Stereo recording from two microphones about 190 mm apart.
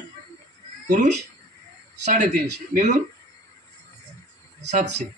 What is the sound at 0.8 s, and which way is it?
Speech, 40° right (ahead or behind).